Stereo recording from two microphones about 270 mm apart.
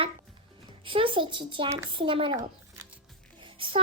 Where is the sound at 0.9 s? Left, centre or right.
Centre.